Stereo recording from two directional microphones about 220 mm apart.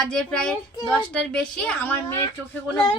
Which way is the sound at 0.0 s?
5° left (ahead or behind).